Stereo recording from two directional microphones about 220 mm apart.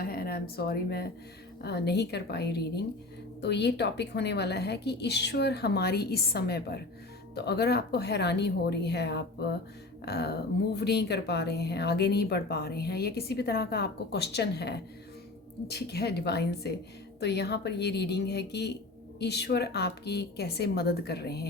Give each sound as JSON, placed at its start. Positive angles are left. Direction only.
{"t": 0.0, "sound": "a woman's voice", "side_deg": 45}